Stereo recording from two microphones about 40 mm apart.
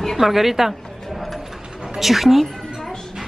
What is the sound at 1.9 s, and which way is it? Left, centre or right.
Speech, centre.